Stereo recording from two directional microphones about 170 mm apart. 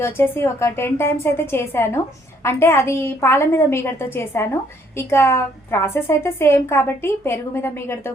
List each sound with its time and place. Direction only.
0.0 s a woman's voice: 15° left (ahead or behind)